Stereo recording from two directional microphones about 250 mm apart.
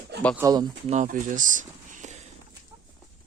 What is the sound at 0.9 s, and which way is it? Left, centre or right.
Speech, right.